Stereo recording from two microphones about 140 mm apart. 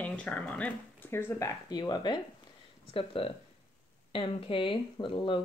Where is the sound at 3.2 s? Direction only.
40° left (ahead or behind).